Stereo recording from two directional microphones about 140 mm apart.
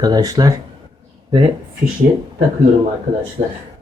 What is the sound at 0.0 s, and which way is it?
Speech, 25° right (ahead or behind).